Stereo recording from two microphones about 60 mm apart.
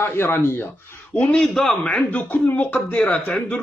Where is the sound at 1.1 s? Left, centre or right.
Centre.